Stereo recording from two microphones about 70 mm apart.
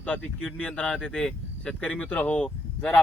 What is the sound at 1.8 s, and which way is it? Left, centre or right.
Speech, left.